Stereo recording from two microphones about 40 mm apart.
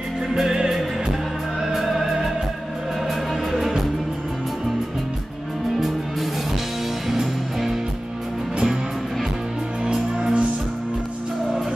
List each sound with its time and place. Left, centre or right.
1.6 s music: centre
3.5 s music: centre
7.1 s music: centre
10.1 s music: right